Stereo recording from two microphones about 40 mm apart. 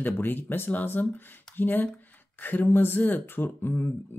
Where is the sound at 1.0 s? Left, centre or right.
Left.